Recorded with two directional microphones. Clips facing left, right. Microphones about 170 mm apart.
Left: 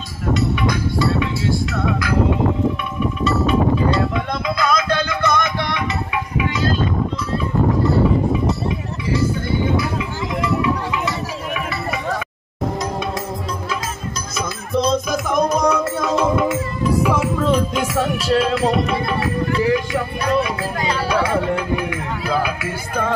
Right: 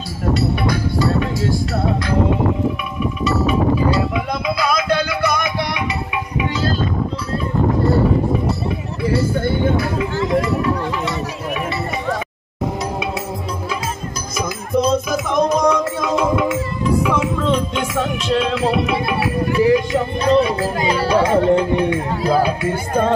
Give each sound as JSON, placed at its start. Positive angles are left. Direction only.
{"t": 0.3, "sound": "music", "side_deg": -35}
{"t": 3.3, "sound": "music", "side_deg": -5}
{"t": 9.4, "sound": "a sound", "side_deg": -55}
{"t": 14.8, "sound": "music", "side_deg": -5}
{"t": 21.1, "sound": "speech", "side_deg": -30}